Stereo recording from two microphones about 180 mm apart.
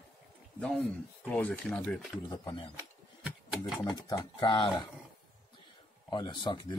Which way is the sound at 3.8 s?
25° left (ahead or behind).